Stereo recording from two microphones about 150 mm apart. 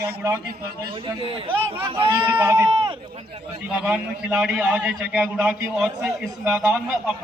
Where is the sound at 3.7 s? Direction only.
5° right (ahead or behind).